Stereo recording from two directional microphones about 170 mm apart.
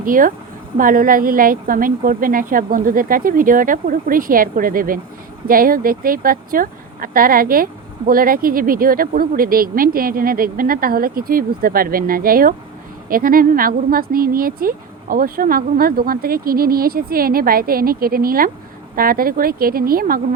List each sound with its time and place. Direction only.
0.0 s speech: 55° right (ahead or behind)